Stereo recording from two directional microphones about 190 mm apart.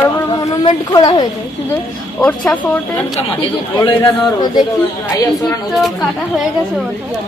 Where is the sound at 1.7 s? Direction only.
10° left (ahead or behind).